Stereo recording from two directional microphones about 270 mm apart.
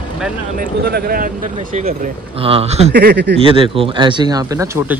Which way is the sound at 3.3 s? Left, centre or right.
Centre.